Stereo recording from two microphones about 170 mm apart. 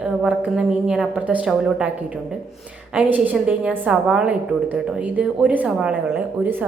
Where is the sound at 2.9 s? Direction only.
10° right (ahead or behind).